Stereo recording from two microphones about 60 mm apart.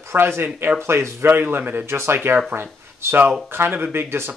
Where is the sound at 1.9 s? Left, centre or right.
Right.